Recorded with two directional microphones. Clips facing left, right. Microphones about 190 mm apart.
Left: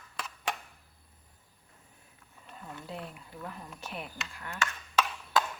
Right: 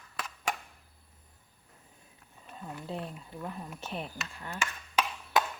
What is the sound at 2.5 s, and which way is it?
Speech, 25° right (ahead or behind).